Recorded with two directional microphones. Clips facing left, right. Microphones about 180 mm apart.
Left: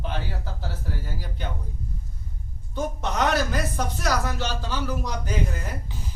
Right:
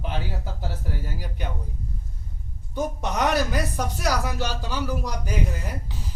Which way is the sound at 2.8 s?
15° right (ahead or behind).